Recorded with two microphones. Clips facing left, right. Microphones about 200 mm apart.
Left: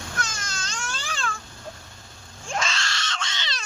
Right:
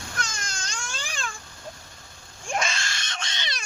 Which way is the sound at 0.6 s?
10° right (ahead or behind).